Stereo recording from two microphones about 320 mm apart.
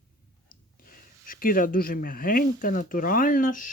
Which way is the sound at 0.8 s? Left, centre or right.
Left.